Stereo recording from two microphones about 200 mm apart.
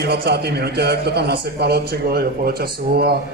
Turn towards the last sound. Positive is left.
turn(degrees=-50)  # may be behind; listen again after turning